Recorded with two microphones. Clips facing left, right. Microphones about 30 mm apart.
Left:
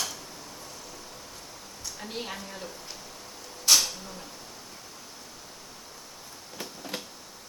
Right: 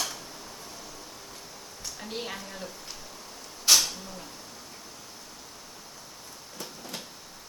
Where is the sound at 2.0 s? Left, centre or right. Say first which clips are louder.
Even; centre.